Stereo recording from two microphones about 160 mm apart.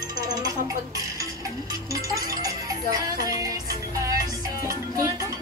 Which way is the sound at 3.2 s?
20° right (ahead or behind).